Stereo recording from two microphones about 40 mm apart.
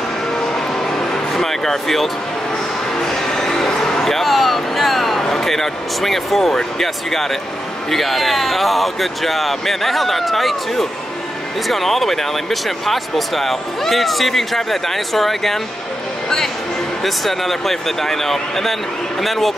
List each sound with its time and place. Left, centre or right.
0.4 s vehicle: centre
3.1 s music: centre
5.2 s speech: centre
17.0 s speech: centre